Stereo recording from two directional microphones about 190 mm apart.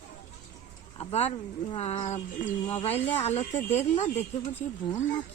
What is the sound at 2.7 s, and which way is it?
Speech, 25° left (ahead or behind).